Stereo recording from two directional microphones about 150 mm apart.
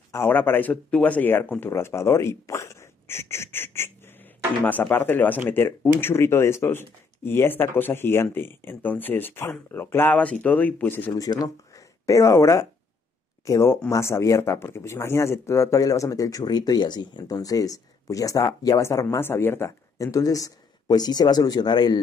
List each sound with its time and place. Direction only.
0.1 s speech: 15° left (ahead or behind)
11.1 s speech: 25° left (ahead or behind)